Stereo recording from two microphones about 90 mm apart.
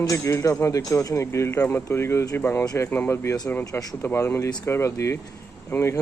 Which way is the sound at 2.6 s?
40° left (ahead or behind).